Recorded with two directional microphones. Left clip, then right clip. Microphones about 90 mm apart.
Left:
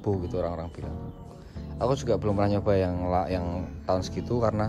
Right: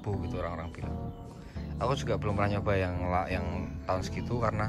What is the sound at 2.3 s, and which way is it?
Speech, 40° left (ahead or behind).